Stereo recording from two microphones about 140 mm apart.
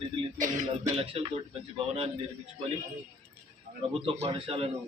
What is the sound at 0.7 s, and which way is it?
Speech, 40° right (ahead or behind).